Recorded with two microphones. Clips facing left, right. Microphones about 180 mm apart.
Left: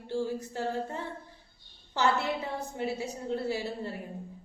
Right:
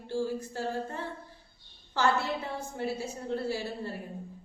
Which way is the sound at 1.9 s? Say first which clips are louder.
Even; 20° left (ahead or behind).